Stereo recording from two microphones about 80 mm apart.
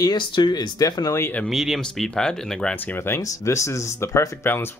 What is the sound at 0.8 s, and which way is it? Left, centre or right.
Speech, left.